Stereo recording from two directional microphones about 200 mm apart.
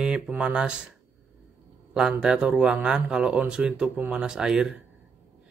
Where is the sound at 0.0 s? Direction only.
5° right (ahead or behind).